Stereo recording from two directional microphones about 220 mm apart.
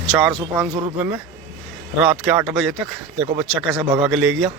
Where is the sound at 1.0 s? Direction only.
5° right (ahead or behind).